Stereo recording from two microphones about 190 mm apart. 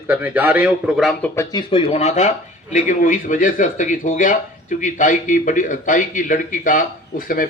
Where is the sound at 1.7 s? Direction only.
30° left (ahead or behind).